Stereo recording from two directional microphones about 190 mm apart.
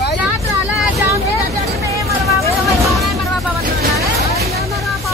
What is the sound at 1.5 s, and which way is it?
Vehicle, 15° right (ahead or behind).